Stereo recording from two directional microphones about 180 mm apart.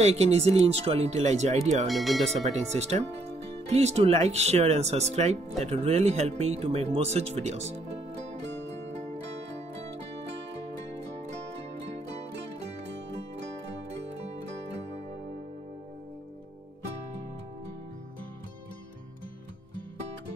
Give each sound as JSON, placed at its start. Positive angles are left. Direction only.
{"t": 0.0, "sound": "speech", "side_deg": -35}
{"t": 1.9, "sound": "speech", "side_deg": 0}
{"t": 2.4, "sound": "speech", "side_deg": -40}
{"t": 8.4, "sound": "music", "side_deg": -75}